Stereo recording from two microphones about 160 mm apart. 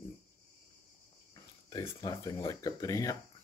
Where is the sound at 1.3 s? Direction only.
25° left (ahead or behind).